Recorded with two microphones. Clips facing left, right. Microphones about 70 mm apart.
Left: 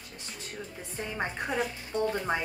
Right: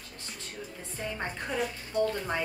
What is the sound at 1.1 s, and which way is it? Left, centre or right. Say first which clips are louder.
A woman's voice: left 3 dB; centre.